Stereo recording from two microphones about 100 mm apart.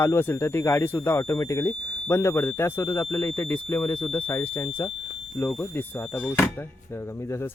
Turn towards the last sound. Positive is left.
turn(degrees=25)  # may be behind; listen again after turning